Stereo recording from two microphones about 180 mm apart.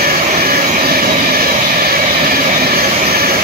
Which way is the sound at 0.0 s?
55° right (ahead or behind).